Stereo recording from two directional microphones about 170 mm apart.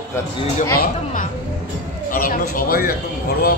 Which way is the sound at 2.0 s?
55° left (ahead or behind).